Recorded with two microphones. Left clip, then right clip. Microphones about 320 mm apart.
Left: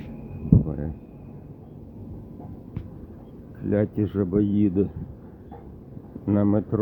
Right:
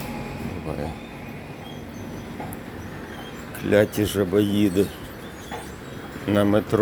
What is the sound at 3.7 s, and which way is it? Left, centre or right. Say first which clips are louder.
Speech: right 6 dB; centre.